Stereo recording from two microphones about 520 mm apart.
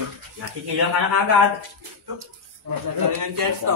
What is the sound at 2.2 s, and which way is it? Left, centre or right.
Speech, right.